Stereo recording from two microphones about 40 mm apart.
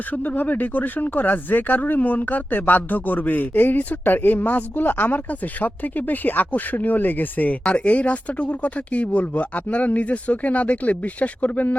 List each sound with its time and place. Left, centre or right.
0.1 s speech: left
7.6 s speech: left